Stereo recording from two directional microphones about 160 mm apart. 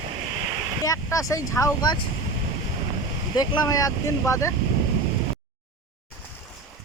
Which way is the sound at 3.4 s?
25° left (ahead or behind).